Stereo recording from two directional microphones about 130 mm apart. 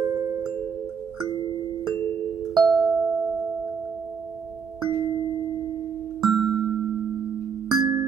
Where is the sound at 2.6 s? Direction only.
5° left (ahead or behind).